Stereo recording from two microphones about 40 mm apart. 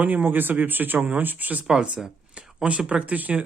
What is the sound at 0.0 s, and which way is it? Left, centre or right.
Speech, right.